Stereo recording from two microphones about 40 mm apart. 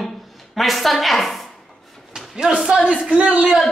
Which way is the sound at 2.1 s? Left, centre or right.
Centre.